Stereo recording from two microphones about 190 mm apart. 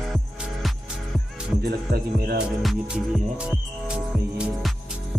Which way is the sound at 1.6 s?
55° right (ahead or behind).